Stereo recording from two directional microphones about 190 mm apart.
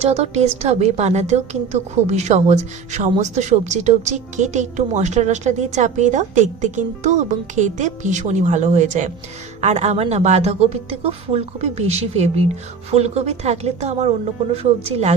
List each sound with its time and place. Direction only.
0.0 s a woman's voice: 35° right (ahead or behind)